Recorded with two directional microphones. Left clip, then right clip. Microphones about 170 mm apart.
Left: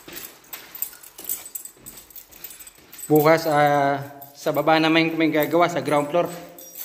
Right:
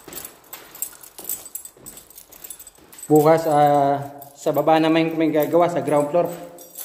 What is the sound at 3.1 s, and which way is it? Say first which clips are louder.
Speech: right 2 dB; 5° right (ahead or behind).